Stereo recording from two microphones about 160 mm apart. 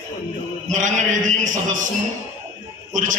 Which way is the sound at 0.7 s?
50° right (ahead or behind).